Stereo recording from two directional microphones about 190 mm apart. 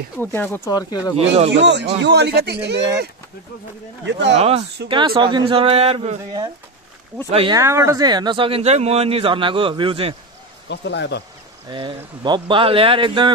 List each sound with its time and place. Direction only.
0.2 s speech: 10° left (ahead or behind)
1.2 s speech: 35° right (ahead or behind)
1.5 s a man's voice: 65° right (ahead or behind)
4.0 s speech: 65° right (ahead or behind)
4.4 s speech: 35° right (ahead or behind)
7.2 s speech: 30° right (ahead or behind)
7.5 s speech: 15° right (ahead or behind)
10.7 s speech: 65° left (ahead or behind)
11.7 s speech: 25° right (ahead or behind)